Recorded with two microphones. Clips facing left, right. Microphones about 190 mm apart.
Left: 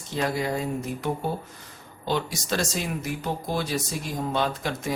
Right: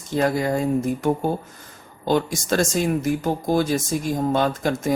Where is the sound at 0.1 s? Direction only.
50° right (ahead or behind).